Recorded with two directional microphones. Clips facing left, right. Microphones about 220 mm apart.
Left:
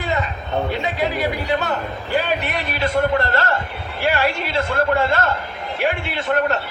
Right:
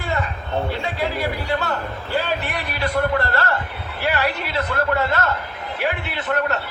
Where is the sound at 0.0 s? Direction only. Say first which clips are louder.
Left 2 dB; 20° left (ahead or behind).